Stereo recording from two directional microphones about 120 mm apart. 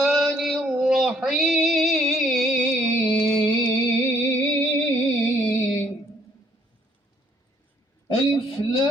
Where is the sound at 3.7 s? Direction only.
20° left (ahead or behind).